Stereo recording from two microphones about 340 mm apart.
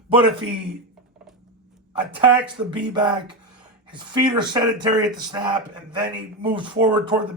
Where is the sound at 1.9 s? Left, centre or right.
Centre.